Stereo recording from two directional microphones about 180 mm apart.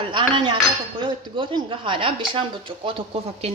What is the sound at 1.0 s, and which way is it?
Speech, 25° right (ahead or behind).